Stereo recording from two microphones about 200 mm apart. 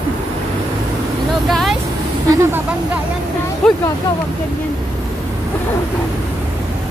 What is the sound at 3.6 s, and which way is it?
Speech, 5° left (ahead or behind).